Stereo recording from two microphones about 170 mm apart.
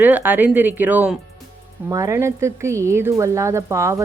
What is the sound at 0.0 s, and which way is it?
Speech, 10° right (ahead or behind).